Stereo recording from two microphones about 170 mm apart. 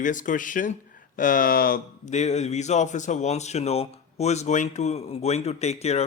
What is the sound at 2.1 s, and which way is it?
Speech, 40° left (ahead or behind).